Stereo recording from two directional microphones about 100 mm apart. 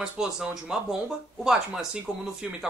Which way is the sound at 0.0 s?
5° right (ahead or behind).